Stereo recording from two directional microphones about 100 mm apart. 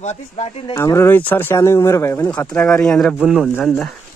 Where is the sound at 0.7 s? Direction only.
25° left (ahead or behind).